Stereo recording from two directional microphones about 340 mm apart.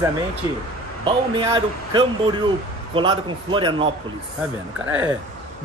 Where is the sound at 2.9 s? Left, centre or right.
Centre.